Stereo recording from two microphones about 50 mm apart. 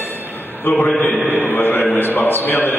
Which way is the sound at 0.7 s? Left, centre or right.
Left.